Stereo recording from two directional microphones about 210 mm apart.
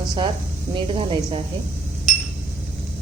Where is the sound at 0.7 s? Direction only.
25° right (ahead or behind).